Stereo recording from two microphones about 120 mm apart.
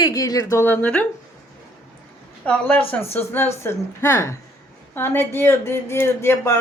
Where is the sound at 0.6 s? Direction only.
15° left (ahead or behind).